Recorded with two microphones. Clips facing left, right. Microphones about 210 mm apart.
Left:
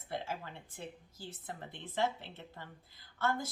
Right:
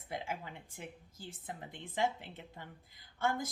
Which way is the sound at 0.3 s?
15° right (ahead or behind).